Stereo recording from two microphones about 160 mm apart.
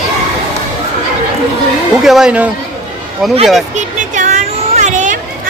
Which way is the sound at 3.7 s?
50° right (ahead or behind).